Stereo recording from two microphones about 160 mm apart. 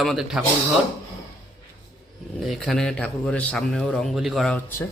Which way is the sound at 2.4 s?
Centre (ahead or behind).